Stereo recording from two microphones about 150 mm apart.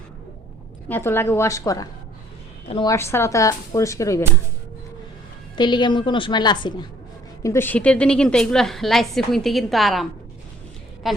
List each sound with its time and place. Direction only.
0.9 s a woman's voice: 15° left (ahead or behind)
5.5 s a woman's voice: 30° left (ahead or behind)
7.4 s a woman's voice: 15° left (ahead or behind); by 11.2 s centre (ahead or behind)